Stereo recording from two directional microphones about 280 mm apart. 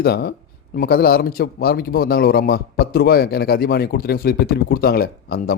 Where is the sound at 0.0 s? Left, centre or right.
Left.